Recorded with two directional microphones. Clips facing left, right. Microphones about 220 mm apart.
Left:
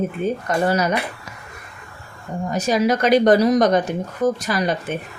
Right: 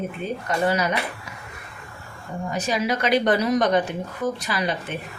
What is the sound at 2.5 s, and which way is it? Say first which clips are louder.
Speech: left 6 dB; 45° left (ahead or behind).